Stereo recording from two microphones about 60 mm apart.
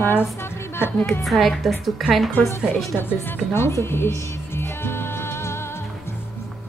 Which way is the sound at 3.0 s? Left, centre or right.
Left.